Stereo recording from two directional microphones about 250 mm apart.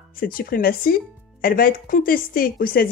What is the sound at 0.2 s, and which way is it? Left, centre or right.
A woman's voice, left.